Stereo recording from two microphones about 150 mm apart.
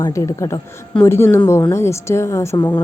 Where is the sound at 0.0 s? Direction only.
20° left (ahead or behind).